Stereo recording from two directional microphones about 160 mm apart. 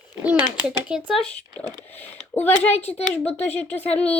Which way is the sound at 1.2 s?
5° left (ahead or behind).